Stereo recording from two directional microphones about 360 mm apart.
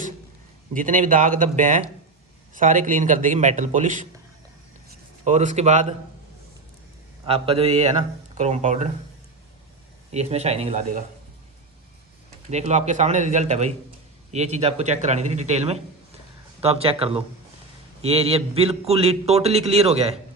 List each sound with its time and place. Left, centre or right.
0.7 s speech: right
5.2 s speech: centre
7.3 s a man's voice: centre
10.1 s a man's voice: centre
12.5 s a man's voice: centre